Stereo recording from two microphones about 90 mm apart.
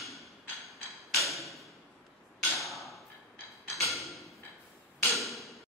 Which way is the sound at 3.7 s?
Centre (ahead or behind).